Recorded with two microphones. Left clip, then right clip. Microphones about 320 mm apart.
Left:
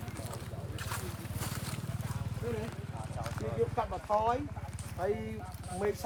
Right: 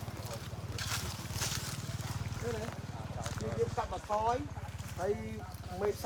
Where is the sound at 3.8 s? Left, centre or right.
Left.